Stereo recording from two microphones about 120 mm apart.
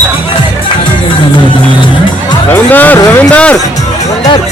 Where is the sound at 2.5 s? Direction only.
15° left (ahead or behind).